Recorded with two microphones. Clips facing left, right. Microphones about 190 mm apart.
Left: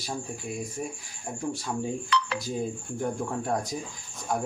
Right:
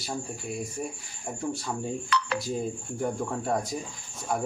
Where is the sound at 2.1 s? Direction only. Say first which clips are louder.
Left 1 dB; 50° right (ahead or behind).